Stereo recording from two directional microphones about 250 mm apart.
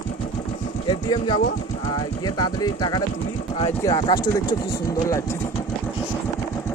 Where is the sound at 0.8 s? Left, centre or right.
Centre.